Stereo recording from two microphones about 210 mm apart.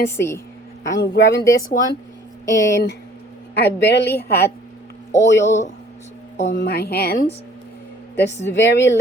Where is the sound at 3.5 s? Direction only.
55° left (ahead or behind).